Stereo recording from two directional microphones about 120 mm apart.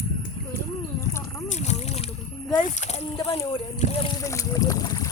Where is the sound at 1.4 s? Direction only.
70° left (ahead or behind).